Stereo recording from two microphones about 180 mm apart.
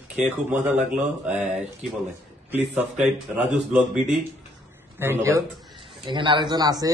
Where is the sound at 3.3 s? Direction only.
5° right (ahead or behind).